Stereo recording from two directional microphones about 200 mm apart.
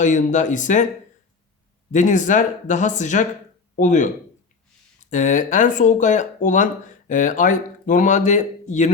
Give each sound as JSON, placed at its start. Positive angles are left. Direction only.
{"t": 0.0, "sound": "speech", "side_deg": 40}
{"t": 1.9, "sound": "speech", "side_deg": 40}
{"t": 5.1, "sound": "speech", "side_deg": 40}